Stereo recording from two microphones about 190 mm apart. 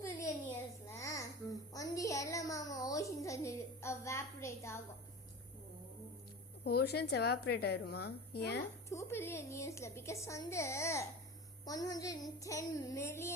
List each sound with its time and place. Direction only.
0.9 s child singing: 15° left (ahead or behind)
6.7 s a woman's voice: 55° left (ahead or behind)
8.9 s a woman's voice: 15° left (ahead or behind)